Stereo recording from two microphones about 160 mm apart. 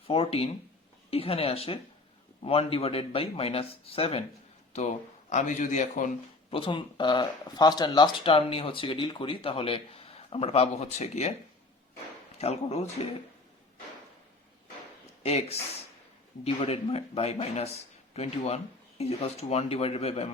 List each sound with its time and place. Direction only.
0.1 s speech: 35° left (ahead or behind)
4.7 s speech: 45° left (ahead or behind)
6.5 s speech: 30° left (ahead or behind)
12.4 s speech: 40° left (ahead or behind)
15.2 s speech: 40° left (ahead or behind)